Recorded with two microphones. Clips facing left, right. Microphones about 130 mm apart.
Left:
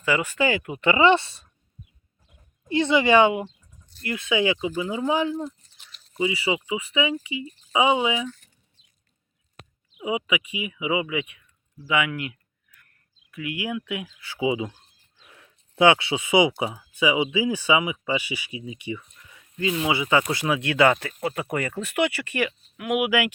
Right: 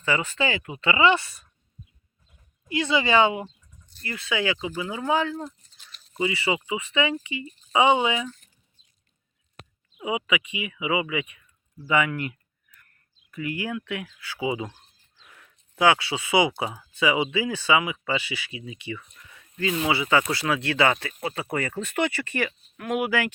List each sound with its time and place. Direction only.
0.0 s speech: 10° left (ahead or behind)
0.8 s speech: 20° left (ahead or behind)
10.0 s speech: 10° left (ahead or behind)
13.3 s speech: 5° left (ahead or behind)
15.3 s speech: 30° left (ahead or behind)
21.1 s speech: 5° right (ahead or behind)
21.8 s speech: 10° left (ahead or behind)